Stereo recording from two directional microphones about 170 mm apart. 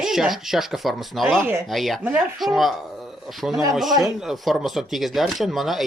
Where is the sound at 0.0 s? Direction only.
Centre (ahead or behind).